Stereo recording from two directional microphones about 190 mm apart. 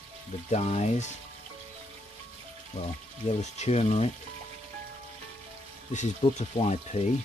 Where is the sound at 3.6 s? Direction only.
35° left (ahead or behind).